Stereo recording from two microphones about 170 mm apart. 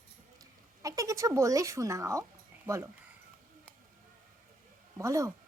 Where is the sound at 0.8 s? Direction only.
20° right (ahead or behind).